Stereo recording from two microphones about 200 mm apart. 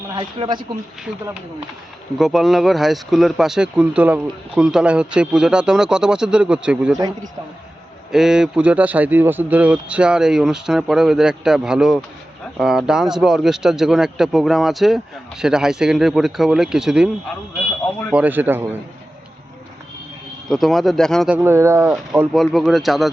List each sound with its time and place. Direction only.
0.1 s speech: 25° right (ahead or behind)
2.1 s speech: centre (ahead or behind)
8.1 s speech: 5° right (ahead or behind)
18.1 s a man's voice: 10° right (ahead or behind)
20.5 s speech: centre (ahead or behind)